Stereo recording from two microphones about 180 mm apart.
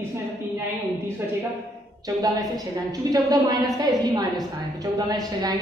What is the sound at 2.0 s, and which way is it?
A woman's voice, 20° right (ahead or behind).